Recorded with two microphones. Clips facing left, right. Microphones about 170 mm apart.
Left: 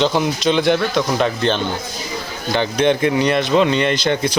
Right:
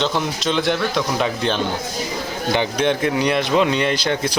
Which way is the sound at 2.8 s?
Centre (ahead or behind).